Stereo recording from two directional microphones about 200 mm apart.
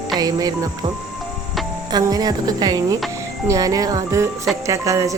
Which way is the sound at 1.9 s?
20° right (ahead or behind).